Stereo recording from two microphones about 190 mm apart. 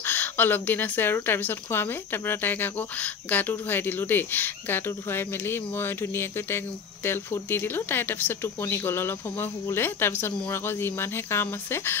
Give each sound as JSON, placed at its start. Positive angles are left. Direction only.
{"t": 0.0, "sound": "speech", "side_deg": 10}